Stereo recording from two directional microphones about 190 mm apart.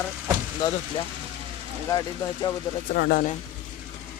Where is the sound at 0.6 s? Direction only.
20° left (ahead or behind).